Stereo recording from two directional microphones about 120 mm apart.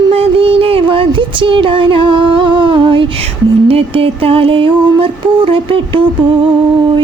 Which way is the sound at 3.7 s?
50° right (ahead or behind).